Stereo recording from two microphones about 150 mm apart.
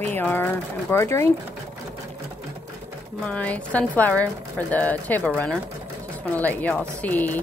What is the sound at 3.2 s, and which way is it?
A woman's voice, 10° left (ahead or behind).